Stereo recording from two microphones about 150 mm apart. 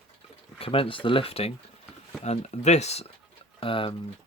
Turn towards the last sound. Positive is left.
turn(degrees=35)  # may be behind; listen again after turning